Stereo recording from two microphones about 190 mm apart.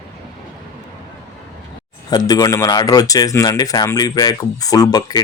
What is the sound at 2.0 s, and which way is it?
Speech, 20° left (ahead or behind).